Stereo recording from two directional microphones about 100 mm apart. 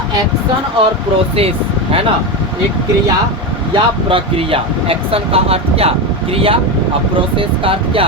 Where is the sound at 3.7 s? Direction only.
60° right (ahead or behind).